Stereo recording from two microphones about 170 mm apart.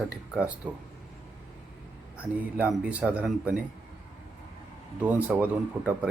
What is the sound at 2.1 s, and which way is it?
Speech, 10° right (ahead or behind).